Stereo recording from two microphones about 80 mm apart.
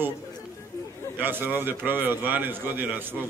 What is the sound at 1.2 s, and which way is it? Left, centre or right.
A man's voice, right.